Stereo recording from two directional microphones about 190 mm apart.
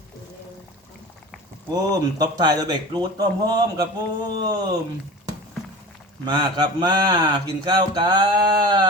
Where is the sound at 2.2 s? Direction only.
20° right (ahead or behind).